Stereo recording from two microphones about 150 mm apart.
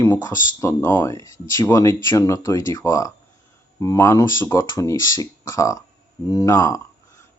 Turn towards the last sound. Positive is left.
turn(degrees=20)  # may be behind; listen again after turning